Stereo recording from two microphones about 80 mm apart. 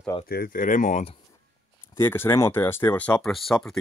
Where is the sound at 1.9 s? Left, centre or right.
Left.